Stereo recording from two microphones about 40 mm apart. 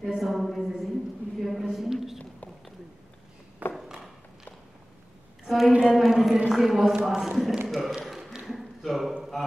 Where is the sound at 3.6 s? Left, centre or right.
Right.